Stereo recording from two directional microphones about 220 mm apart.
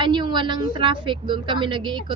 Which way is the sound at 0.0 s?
20° right (ahead or behind).